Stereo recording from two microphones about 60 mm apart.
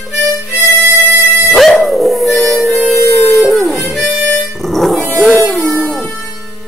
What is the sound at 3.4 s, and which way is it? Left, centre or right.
Music, centre.